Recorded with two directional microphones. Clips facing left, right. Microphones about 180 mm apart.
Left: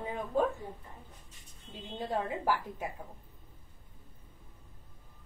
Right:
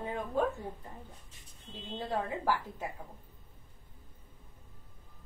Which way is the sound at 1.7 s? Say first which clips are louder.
Left 1 dB; 15° left (ahead or behind).